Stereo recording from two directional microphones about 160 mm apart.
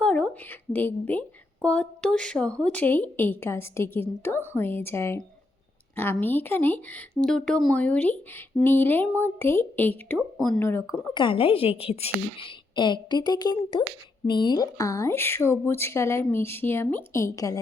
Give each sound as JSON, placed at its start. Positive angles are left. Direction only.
{"t": 0.0, "sound": "a sound", "side_deg": 5}
{"t": 0.7, "sound": "a woman's voice", "side_deg": 10}
{"t": 10.2, "sound": "speech", "side_deg": 0}
{"t": 10.6, "sound": "a woman's voice", "side_deg": 15}
{"t": 11.1, "sound": "a woman's voice", "side_deg": 30}